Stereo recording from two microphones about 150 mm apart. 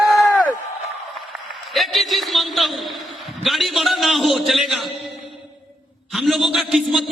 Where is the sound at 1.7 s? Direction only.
Centre (ahead or behind).